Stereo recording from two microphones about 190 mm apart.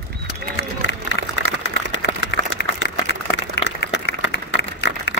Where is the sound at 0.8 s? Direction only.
75° left (ahead or behind).